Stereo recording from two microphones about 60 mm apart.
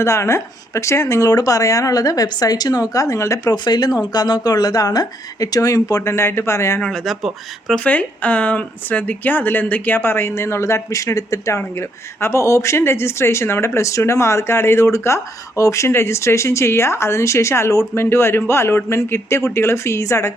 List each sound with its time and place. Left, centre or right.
0.0 s speech: left
6.0 s speech: left
7.0 s speech: centre
7.9 s speech: left
10.9 s speech: left
15.9 s speech: left